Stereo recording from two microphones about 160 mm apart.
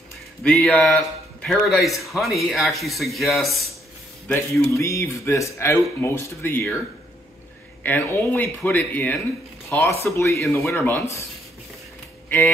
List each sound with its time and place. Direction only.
0.4 s a man's voice: 5° left (ahead or behind)
4.3 s speech: 20° left (ahead or behind)
7.8 s speech: 10° left (ahead or behind)